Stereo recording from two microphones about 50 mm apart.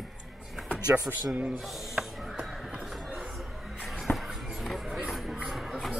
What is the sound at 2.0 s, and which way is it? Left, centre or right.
Music, centre.